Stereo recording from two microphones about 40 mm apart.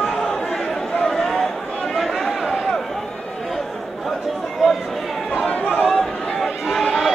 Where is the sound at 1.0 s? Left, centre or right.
Centre.